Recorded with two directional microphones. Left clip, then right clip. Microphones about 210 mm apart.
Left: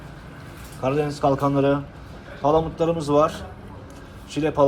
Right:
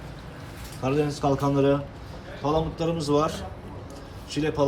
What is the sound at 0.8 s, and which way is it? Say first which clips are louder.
Speech: left 3 dB; 15° right (ahead or behind).